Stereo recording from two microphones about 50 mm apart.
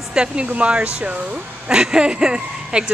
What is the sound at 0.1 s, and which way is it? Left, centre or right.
A woman's voice, centre.